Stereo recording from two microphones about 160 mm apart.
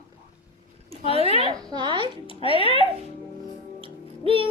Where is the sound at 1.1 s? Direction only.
35° right (ahead or behind).